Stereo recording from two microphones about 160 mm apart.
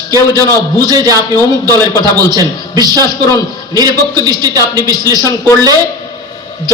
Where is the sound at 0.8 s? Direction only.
25° right (ahead or behind).